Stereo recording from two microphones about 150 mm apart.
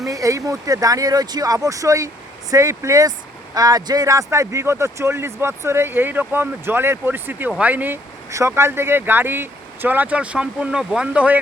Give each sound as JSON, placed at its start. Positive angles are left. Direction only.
{"t": 0.0, "sound": "speech", "side_deg": -20}